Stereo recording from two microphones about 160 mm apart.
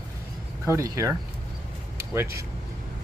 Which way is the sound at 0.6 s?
20° right (ahead or behind).